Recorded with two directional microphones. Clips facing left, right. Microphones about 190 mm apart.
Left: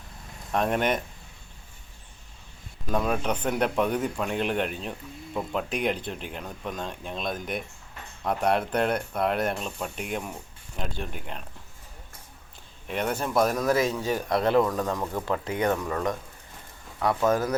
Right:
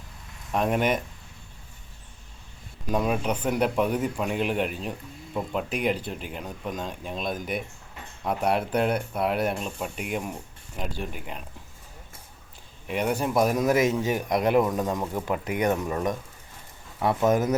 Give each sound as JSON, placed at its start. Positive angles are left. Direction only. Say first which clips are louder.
{"t": 0.5, "sound": "speech", "louder": "right 1 dB", "side_deg": -5}
{"t": 2.9, "sound": "speech", "louder": "right 1 dB", "side_deg": -10}
{"t": 12.9, "sound": "speech", "louder": "right 2 dB", "side_deg": -10}